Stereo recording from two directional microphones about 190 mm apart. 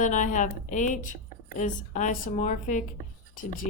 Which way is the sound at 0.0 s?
40° left (ahead or behind).